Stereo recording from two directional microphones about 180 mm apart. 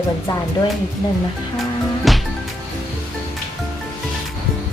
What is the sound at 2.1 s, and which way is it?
Music, centre (ahead or behind).